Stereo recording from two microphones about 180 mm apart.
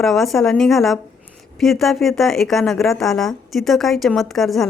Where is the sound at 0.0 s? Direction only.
Centre (ahead or behind).